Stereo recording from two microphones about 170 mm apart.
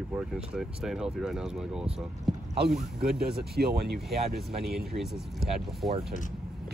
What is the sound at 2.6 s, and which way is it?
Speech, 65° right (ahead or behind).